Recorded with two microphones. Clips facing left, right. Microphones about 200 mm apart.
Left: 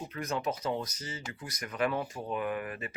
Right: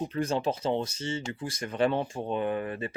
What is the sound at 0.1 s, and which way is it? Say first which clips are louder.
Speech: right 5 dB; 30° right (ahead or behind).